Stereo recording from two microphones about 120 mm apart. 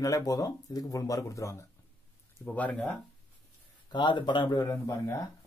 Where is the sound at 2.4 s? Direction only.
10° left (ahead or behind).